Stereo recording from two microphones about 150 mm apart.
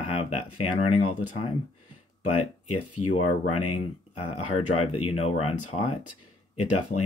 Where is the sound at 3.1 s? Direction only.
45° left (ahead or behind).